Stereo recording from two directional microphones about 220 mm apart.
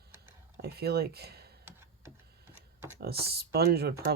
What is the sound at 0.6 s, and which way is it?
Speech, 45° right (ahead or behind).